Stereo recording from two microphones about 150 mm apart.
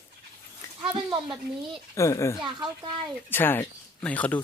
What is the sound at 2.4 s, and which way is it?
Speech, 30° right (ahead or behind).